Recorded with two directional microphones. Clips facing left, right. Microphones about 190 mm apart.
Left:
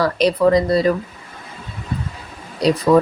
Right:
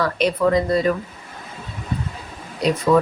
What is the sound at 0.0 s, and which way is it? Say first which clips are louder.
Speech: left 4 dB; 35° left (ahead or behind).